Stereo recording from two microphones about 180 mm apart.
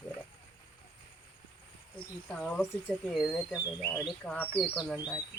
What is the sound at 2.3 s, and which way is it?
Speech, 5° left (ahead or behind).